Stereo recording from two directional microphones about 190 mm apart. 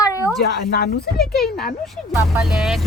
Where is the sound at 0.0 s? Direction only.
15° left (ahead or behind).